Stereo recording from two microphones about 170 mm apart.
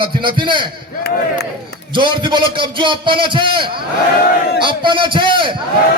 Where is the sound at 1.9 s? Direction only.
30° right (ahead or behind).